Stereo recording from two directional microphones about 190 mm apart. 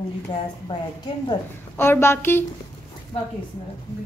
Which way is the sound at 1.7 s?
15° left (ahead or behind).